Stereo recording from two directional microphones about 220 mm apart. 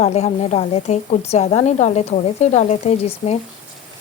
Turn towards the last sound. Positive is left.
turn(degrees=30)  # may be behind; listen again after turning